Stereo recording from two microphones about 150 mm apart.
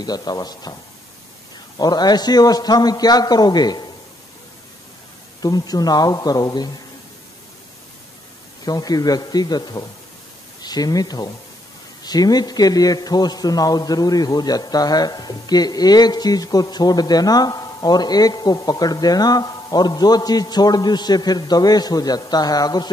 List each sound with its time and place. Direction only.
0.0 s a man's voice: 25° left (ahead or behind)
1.8 s a man's voice: 25° left (ahead or behind)
5.4 s a man's voice: 25° left (ahead or behind)
8.6 s a man's voice: 25° left (ahead or behind)